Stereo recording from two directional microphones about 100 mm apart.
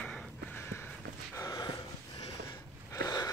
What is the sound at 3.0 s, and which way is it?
Wheeze, 35° left (ahead or behind).